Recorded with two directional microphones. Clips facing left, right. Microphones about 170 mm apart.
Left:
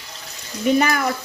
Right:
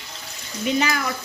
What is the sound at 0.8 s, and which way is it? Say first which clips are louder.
Speech: left 4 dB; 50° left (ahead or behind).